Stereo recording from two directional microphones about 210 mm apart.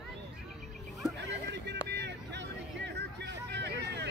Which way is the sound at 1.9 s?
55° right (ahead or behind).